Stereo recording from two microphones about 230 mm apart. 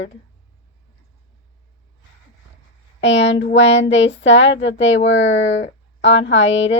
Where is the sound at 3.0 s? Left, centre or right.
Left.